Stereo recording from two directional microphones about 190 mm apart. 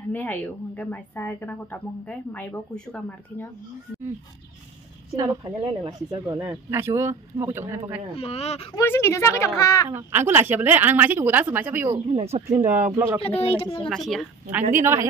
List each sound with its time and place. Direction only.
0.1 s a woman's voice: 10° left (ahead or behind)
5.1 s speech: 20° right (ahead or behind)
8.2 s speech: 35° left (ahead or behind)
8.7 s a woman's voice: 15° left (ahead or behind)
9.8 s speech: 10° right (ahead or behind)
12.1 s speech: 35° right (ahead or behind)
12.6 s speech: 10° right (ahead or behind)
13.4 s speech: 30° left (ahead or behind)
13.8 s speech: centre (ahead or behind)
14.7 s speech: 15° right (ahead or behind)